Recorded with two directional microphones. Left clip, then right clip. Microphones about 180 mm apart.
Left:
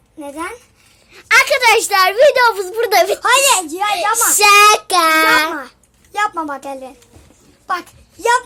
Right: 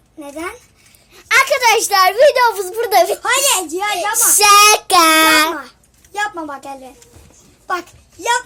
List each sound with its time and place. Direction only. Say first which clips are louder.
1.1 s a woman's voice: left 1 dB; 5° left (ahead or behind)
3.2 s a child's voice: left 3 dB; 60° left (ahead or behind)
4.4 s a woman's voice: even; centre (ahead or behind)
6.1 s a child's voice: left 3 dB; 60° left (ahead or behind)